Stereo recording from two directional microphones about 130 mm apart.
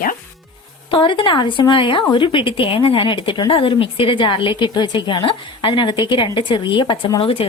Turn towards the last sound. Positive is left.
turn(degrees=45)  # may be behind; listen again after turning